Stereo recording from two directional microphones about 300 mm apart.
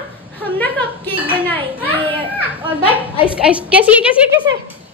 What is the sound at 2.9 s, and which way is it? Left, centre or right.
Speech, centre.